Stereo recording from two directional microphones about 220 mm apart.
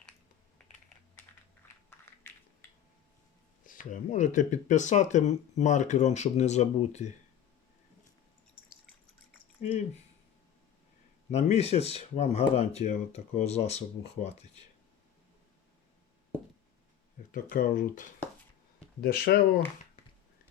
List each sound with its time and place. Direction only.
1.6 s a sound: 10° left (ahead or behind)
2.3 s crushing: 10° left (ahead or behind)
3.7 s speech: 35° left (ahead or behind)
9.6 s a sound: 30° left (ahead or behind)
11.3 s speech: 30° left (ahead or behind)
17.5 s speech: 40° left (ahead or behind)